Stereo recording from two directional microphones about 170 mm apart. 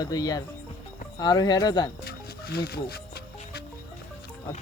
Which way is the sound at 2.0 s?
65° left (ahead or behind).